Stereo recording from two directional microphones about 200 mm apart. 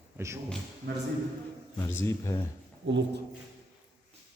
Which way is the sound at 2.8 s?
65° right (ahead or behind).